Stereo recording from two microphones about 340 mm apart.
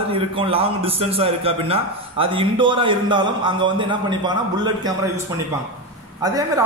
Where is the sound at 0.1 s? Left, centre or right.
Centre.